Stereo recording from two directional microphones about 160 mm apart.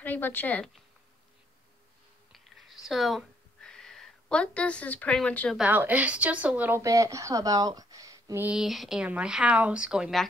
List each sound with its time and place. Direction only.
0.0 s speech: 10° left (ahead or behind)
2.3 s a sound: centre (ahead or behind)
5.6 s speech: 10° right (ahead or behind)
6.8 s speech: 20° right (ahead or behind)
8.5 s speech: centre (ahead or behind)